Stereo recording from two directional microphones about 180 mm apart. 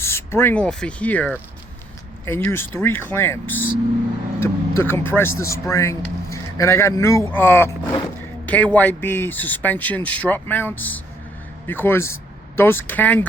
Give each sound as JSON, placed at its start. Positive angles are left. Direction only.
{"t": 0.0, "sound": "a man's voice", "side_deg": 15}